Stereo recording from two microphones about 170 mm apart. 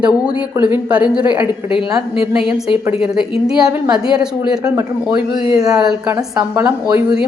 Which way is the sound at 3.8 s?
5° right (ahead or behind).